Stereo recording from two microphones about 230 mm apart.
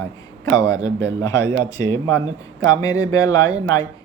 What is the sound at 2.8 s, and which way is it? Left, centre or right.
Speech, centre.